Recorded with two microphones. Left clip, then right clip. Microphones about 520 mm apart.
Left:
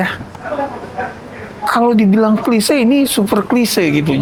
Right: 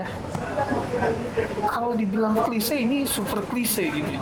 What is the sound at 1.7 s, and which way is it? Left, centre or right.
Speech, left.